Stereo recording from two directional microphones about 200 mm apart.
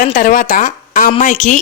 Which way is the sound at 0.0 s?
40° left (ahead or behind).